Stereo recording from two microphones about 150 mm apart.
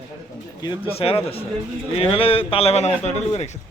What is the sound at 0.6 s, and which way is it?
A man's voice, 35° left (ahead or behind).